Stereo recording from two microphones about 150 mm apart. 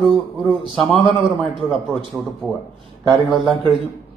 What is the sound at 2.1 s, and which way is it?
Speech, 10° right (ahead or behind).